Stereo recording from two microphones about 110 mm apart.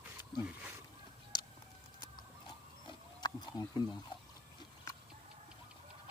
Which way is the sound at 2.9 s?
40° left (ahead or behind).